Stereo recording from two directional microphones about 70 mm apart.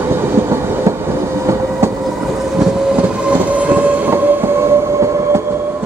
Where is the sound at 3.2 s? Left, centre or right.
Right.